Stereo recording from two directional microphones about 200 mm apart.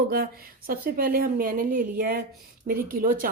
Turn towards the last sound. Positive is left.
turn(degrees=-45)  # may be behind; listen again after turning